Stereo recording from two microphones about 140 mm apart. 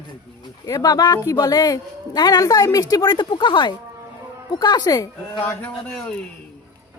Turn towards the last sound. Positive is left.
turn(degrees=10)  # may be behind; listen again after turning